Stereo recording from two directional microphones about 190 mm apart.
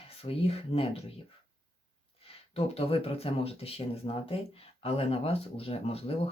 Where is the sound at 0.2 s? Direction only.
30° left (ahead or behind).